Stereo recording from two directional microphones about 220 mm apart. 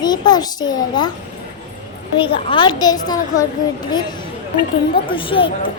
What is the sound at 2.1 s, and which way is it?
A child's voice, 20° left (ahead or behind).